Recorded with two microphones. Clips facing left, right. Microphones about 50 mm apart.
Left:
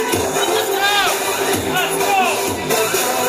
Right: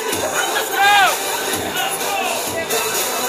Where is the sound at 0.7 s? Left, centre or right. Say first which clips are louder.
Right 8 dB; centre.